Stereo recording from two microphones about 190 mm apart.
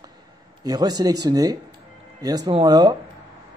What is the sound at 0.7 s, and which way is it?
Speech, 20° right (ahead or behind).